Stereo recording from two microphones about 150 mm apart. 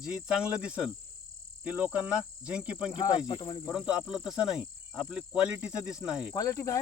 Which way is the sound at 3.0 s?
30° left (ahead or behind).